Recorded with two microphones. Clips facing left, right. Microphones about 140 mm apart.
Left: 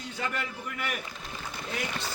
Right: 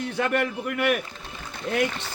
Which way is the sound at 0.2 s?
60° right (ahead or behind).